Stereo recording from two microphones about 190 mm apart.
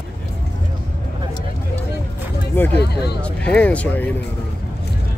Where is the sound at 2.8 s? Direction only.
60° left (ahead or behind).